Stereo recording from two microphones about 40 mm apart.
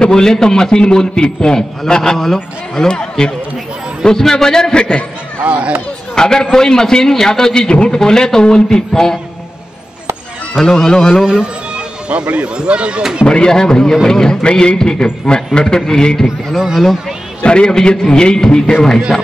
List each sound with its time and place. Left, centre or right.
0.0 s a man's voice: centre
5.4 s speech: right
6.1 s a man's voice: centre
10.6 s a man's voice: centre
11.2 s a sound: right
12.3 s speech: right
13.2 s a man's voice: left
16.5 s speech: centre
17.4 s a man's voice: left